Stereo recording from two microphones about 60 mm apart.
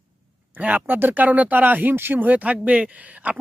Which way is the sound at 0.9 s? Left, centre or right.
Right.